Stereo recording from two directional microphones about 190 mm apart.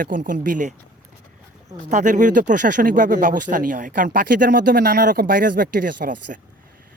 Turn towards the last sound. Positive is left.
turn(degrees=-45)  # may be behind; listen again after turning